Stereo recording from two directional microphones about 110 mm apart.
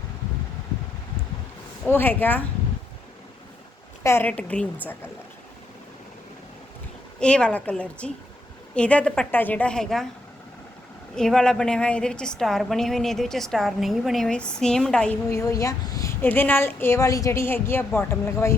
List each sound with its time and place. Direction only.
1.9 s a woman's voice: 20° left (ahead or behind)
4.0 s a woman's voice: 20° left (ahead or behind)
7.2 s a woman's voice: 10° left (ahead or behind)
11.1 s a woman's voice: 5° left (ahead or behind)
15.3 s a woman's voice: 30° left (ahead or behind)
16.2 s a woman's voice: 20° left (ahead or behind)